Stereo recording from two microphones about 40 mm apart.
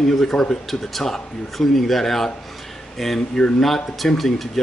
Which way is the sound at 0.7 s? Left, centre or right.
Centre.